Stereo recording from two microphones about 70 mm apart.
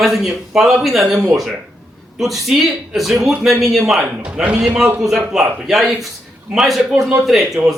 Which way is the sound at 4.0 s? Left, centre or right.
Centre.